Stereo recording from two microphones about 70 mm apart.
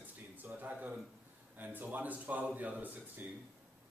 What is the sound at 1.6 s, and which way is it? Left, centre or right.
A man's voice, right.